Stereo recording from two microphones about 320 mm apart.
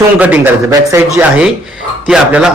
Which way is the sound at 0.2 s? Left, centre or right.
Centre.